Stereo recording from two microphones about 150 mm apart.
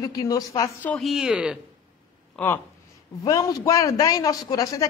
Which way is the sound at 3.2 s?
25° left (ahead or behind).